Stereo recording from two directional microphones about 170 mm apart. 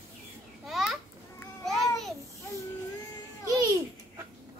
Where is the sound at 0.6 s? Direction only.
Centre (ahead or behind).